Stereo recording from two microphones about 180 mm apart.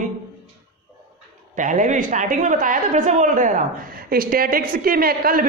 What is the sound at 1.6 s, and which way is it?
A man's voice, 45° right (ahead or behind).